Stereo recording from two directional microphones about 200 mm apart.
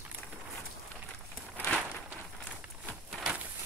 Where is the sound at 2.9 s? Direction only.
5° right (ahead or behind).